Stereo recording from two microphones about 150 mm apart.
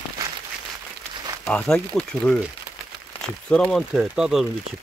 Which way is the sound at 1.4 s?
5° left (ahead or behind).